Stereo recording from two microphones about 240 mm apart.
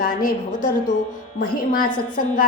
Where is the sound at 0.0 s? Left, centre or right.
Left.